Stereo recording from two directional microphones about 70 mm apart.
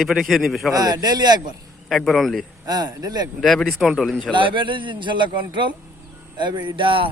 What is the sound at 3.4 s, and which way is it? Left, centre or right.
Speech, centre.